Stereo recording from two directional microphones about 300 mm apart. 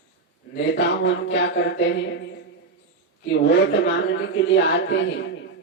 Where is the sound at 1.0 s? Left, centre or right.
Left.